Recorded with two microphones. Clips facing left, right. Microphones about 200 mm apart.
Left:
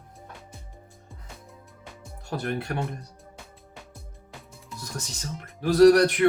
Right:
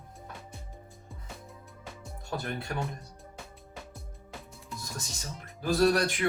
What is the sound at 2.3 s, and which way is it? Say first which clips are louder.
Speech: left 5 dB; 65° left (ahead or behind).